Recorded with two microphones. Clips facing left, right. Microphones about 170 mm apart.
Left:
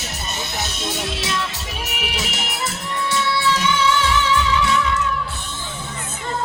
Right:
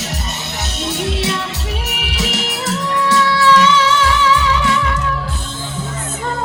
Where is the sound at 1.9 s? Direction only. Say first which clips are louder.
Right 4 dB; 75° right (ahead or behind).